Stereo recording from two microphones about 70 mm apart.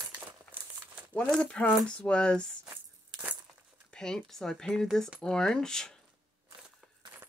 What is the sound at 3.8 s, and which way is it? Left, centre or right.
Speech, centre.